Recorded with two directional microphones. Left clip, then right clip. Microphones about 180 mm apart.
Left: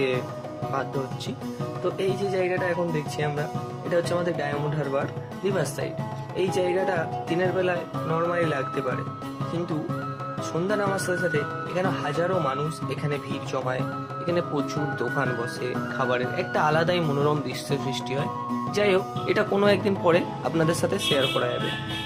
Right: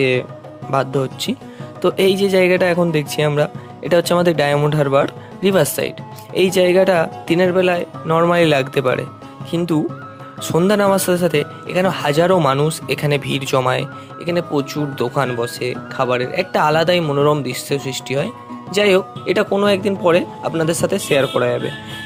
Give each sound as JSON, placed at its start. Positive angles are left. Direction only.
{"t": 1.8, "sound": "speech", "side_deg": -65}
{"t": 10.7, "sound": "speech", "side_deg": -55}
{"t": 14.3, "sound": "speech", "side_deg": -40}